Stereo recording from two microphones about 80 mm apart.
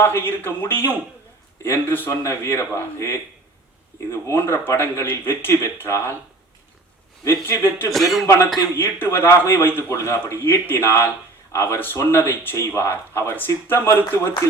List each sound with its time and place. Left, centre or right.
0.0 s a man's voice: left
7.3 s a man's voice: left
7.9 s speech: centre
8.7 s a man's voice: left